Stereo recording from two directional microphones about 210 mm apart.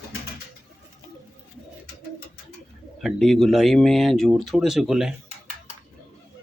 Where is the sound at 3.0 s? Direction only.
Centre (ahead or behind).